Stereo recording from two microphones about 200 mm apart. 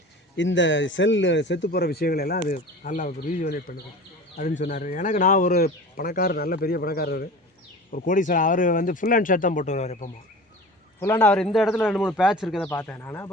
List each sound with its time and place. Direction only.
0.3 s speech: 65° left (ahead or behind); by 10.1 s 35° left (ahead or behind)
11.0 s a man's voice: 10° left (ahead or behind)
12.6 s speech: 10° left (ahead or behind)